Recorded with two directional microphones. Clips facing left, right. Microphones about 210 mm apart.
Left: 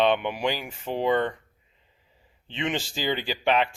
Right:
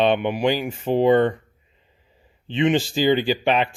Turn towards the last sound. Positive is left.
turn(degrees=-20)  # may be behind; listen again after turning